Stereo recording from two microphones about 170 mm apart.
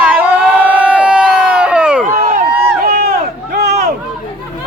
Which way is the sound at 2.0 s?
50° right (ahead or behind).